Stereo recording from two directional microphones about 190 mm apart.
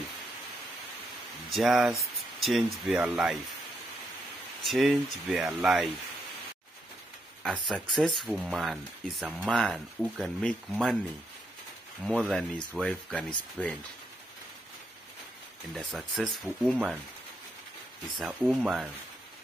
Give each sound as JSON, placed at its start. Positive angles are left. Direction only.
{"t": 1.5, "sound": "speech", "side_deg": 0}
{"t": 4.6, "sound": "speech", "side_deg": 0}
{"t": 7.4, "sound": "speech", "side_deg": 0}
{"t": 12.0, "sound": "speech", "side_deg": 0}
{"t": 15.7, "sound": "speech", "side_deg": 0}
{"t": 18.1, "sound": "speech", "side_deg": 0}